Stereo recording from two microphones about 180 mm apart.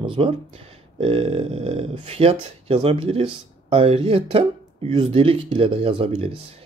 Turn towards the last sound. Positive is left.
turn(degrees=-30)  # may be behind; listen again after turning